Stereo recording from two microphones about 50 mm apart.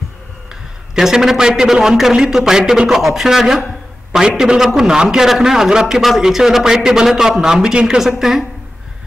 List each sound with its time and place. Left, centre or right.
0.9 s a man's voice: centre